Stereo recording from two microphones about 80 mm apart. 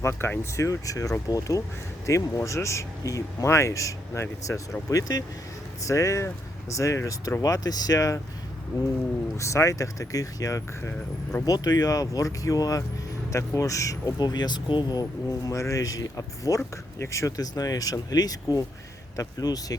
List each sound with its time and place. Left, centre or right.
0.0 s speech: left
9.4 s speech: left
14.2 s speech: left
15.4 s speech: left